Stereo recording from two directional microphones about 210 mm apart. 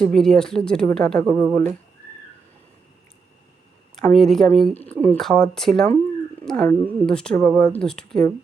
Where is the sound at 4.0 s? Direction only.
Centre (ahead or behind).